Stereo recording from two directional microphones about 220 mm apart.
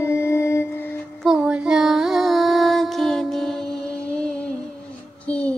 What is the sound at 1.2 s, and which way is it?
Music, centre (ahead or behind).